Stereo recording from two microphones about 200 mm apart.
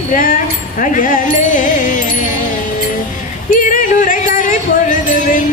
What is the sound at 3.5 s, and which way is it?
Music, 45° left (ahead or behind).